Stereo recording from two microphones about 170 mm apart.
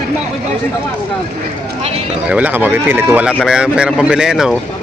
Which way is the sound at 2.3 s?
10° right (ahead or behind).